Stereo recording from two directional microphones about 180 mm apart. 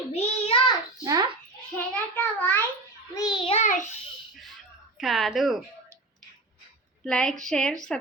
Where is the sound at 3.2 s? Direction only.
25° left (ahead or behind); by 3.8 s 40° left (ahead or behind).